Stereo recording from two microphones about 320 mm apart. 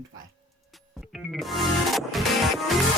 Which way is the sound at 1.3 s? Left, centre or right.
Centre.